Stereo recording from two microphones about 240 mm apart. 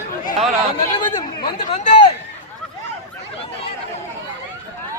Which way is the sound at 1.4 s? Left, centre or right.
Left.